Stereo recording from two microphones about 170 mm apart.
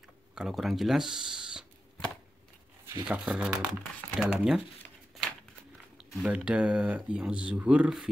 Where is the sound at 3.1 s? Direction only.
5° right (ahead or behind).